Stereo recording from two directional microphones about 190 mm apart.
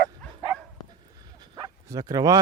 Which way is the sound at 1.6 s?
20° right (ahead or behind).